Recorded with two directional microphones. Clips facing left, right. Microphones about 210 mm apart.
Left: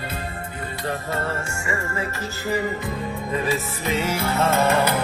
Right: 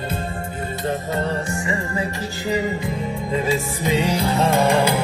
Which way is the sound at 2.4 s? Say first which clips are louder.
Right 2 dB; 20° right (ahead or behind).